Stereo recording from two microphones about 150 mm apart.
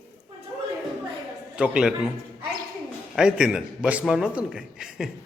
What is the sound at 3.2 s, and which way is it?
A man's voice, 5° right (ahead or behind).